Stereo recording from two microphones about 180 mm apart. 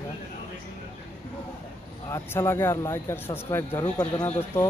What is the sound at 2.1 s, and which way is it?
Speech, 15° left (ahead or behind).